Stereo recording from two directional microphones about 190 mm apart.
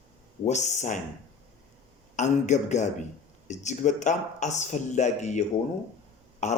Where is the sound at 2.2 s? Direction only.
40° left (ahead or behind).